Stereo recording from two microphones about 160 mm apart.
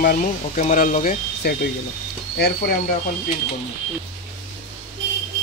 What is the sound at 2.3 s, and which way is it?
Speech, 90° left.